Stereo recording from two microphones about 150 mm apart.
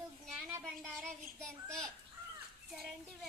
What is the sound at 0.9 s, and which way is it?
Child singing, 5° left (ahead or behind).